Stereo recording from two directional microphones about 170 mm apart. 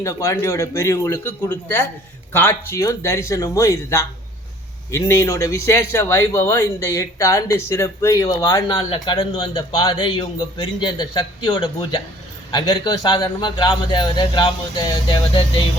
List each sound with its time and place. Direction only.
0.0 s speech: 20° left (ahead or behind)